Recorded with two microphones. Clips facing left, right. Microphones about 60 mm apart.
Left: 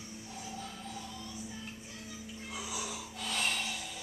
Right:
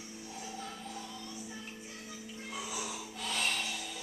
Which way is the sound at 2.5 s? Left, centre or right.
Centre.